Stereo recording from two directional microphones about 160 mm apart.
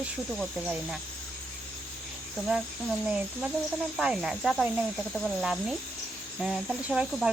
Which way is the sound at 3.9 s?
5° right (ahead or behind).